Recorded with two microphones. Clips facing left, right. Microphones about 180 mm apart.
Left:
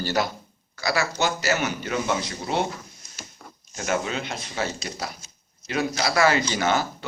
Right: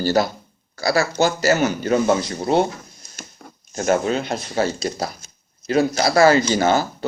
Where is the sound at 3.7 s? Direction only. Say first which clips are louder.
Right 7 dB; 45° right (ahead or behind).